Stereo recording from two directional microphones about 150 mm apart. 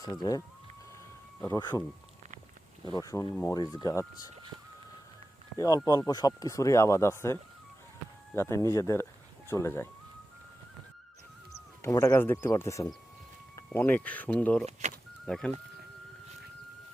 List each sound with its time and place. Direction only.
0.0 s speech: 25° left (ahead or behind)
1.5 s speech: 30° left (ahead or behind)
2.8 s speech: 25° left (ahead or behind)
5.5 s speech: 25° left (ahead or behind)
8.4 s speech: 20° left (ahead or behind)
11.8 s speech: 20° left (ahead or behind)
14.7 s speech: 50° right (ahead or behind)
15.3 s speech: 5° left (ahead or behind)